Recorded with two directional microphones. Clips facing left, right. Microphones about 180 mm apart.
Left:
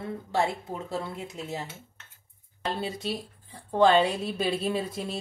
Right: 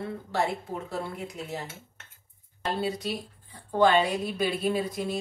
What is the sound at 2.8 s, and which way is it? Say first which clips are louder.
A woman's voice: right 2 dB; 25° left (ahead or behind).